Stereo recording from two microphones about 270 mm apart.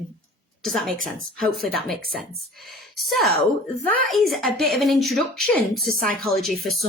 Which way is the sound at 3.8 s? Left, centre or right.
Right.